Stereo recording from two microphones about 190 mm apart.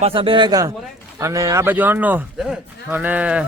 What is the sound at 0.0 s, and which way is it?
A man's voice, 30° right (ahead or behind).